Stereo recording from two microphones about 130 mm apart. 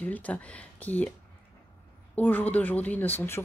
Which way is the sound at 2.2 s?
15° left (ahead or behind).